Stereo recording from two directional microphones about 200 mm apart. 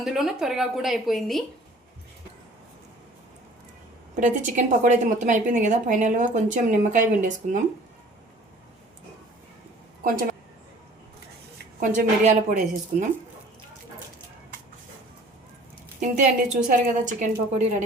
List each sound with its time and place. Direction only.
0.0 s a woman's voice: centre (ahead or behind)
4.1 s a woman's voice: 40° right (ahead or behind)
11.5 s speech: 40° right (ahead or behind)
16.0 s a woman's voice: 40° right (ahead or behind)